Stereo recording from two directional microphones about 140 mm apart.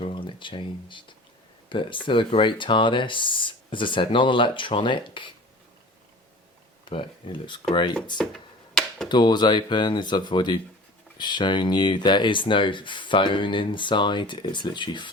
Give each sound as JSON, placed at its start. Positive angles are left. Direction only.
{"t": 0.0, "sound": "speech", "side_deg": 35}
{"t": 6.9, "sound": "speech", "side_deg": 35}
{"t": 8.2, "sound": "a sound", "side_deg": 5}
{"t": 9.0, "sound": "speech", "side_deg": 30}